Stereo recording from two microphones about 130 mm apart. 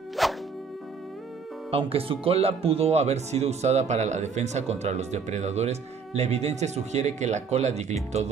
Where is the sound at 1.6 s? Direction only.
45° right (ahead or behind).